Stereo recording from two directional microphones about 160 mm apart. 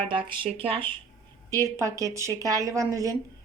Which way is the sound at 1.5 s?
20° right (ahead or behind).